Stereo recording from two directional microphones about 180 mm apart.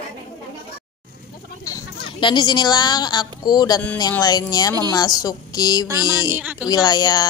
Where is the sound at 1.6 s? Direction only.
25° left (ahead or behind).